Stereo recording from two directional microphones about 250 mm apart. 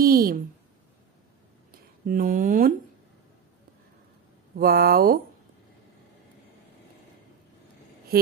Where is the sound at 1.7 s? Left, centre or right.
Right.